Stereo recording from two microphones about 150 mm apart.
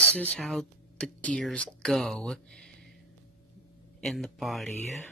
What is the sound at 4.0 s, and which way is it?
Speech, centre (ahead or behind).